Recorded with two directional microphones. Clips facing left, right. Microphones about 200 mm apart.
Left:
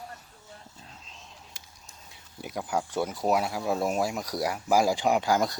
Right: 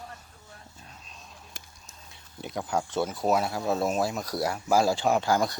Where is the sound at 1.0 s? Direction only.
20° left (ahead or behind).